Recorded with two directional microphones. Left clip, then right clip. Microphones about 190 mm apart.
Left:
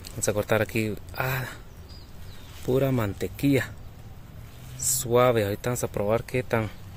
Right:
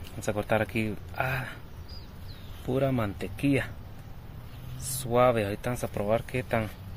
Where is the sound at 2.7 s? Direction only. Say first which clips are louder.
Left 3 dB; 70° left (ahead or behind).